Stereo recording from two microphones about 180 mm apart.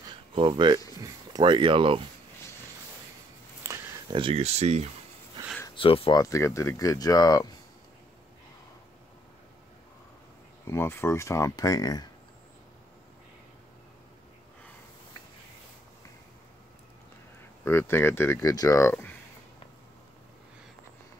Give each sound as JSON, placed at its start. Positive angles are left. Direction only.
{"t": 0.3, "sound": "speech", "side_deg": -30}
{"t": 3.6, "sound": "a sound", "side_deg": -15}
{"t": 4.1, "sound": "speech", "side_deg": -30}
{"t": 5.8, "sound": "speech", "side_deg": 30}
{"t": 6.2, "sound": "speech", "side_deg": 15}
{"t": 10.7, "sound": "speech", "side_deg": 15}
{"t": 17.6, "sound": "speech", "side_deg": 15}